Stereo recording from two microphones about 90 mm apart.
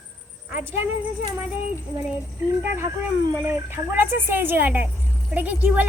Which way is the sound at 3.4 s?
25° right (ahead or behind).